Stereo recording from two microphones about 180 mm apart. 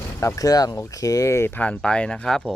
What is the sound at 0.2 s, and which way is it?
A man's voice, 15° left (ahead or behind).